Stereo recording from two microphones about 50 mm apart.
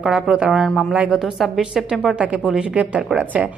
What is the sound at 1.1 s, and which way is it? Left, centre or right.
Speech, centre.